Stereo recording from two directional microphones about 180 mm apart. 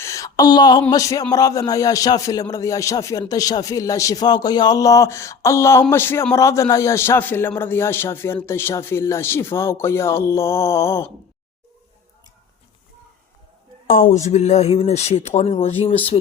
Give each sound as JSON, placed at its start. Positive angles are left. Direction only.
{"t": 0.0, "sound": "a sound", "side_deg": 15}
{"t": 1.3, "sound": "a man's voice", "side_deg": 20}
{"t": 13.8, "sound": "speech", "side_deg": 50}